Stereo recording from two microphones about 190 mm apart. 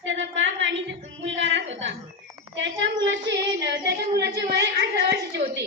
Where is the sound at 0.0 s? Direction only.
85° right; by 3.9 s 65° right (ahead or behind).